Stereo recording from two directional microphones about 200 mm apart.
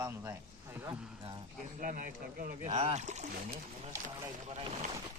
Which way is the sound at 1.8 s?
40° right (ahead or behind).